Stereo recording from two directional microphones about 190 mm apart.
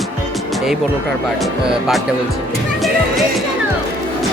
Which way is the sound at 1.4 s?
Centre (ahead or behind).